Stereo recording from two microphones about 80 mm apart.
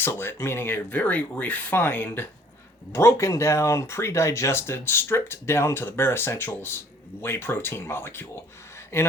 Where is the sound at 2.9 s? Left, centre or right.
Left.